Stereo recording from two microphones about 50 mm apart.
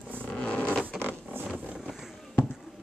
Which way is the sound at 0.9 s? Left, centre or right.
Right.